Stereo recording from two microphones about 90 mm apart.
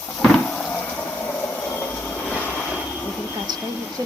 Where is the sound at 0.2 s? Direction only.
15° left (ahead or behind).